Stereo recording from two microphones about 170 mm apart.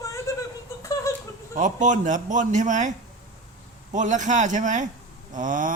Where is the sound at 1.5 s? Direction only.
45° right (ahead or behind).